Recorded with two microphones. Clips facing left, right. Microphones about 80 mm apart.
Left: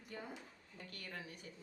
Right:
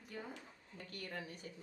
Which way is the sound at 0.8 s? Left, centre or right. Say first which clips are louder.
Right 3 dB; right.